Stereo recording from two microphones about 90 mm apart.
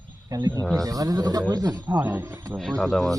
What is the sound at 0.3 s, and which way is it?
A man's voice, 50° right (ahead or behind).